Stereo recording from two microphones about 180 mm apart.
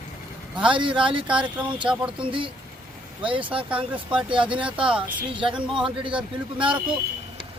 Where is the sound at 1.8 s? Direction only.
5° right (ahead or behind).